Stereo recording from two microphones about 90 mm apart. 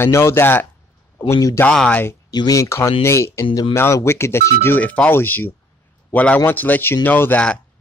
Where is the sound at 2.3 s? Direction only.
50° left (ahead or behind).